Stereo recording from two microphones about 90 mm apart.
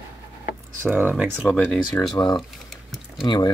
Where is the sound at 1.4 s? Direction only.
15° left (ahead or behind).